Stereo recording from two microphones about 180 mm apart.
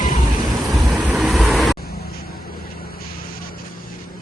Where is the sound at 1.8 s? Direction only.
60° left (ahead or behind).